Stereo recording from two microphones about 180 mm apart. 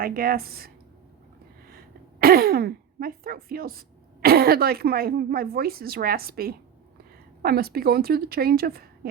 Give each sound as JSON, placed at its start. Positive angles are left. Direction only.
{"t": 0.0, "sound": "a woman's voice", "side_deg": -55}
{"t": 1.7, "sound": "a woman's voice", "side_deg": -55}